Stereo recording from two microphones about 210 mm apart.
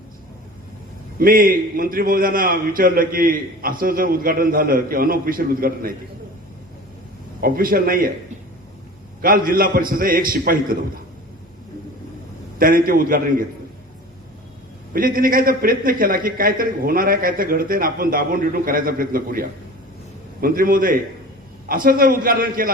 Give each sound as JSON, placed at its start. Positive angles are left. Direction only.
{"t": 1.2, "sound": "a man's voice", "side_deg": -40}
{"t": 7.4, "sound": "a man's voice", "side_deg": -45}
{"t": 9.2, "sound": "a man's voice", "side_deg": -40}
{"t": 12.5, "sound": "a man's voice", "side_deg": -40}
{"t": 14.9, "sound": "a man's voice", "side_deg": -40}